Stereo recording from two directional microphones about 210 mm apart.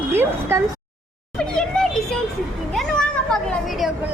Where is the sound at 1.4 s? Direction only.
5° left (ahead or behind).